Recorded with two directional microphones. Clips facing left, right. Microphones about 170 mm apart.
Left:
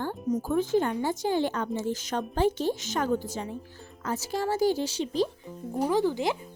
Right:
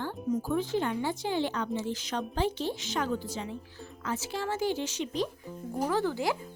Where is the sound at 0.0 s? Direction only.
40° left (ahead or behind).